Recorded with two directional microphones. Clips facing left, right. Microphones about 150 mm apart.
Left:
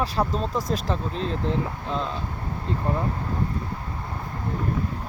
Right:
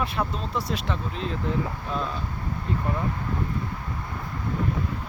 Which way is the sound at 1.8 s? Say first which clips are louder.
Left 1 dB; 25° left (ahead or behind).